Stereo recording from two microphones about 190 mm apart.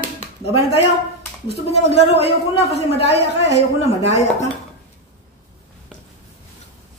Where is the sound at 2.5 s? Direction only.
30° left (ahead or behind).